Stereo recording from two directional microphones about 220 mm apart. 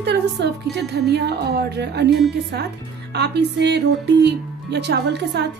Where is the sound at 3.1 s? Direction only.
50° right (ahead or behind).